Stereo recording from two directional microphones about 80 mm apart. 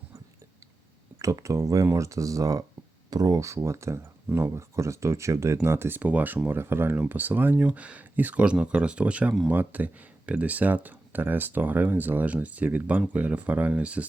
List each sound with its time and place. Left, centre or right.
1.2 s speech: right; by 14.0 s centre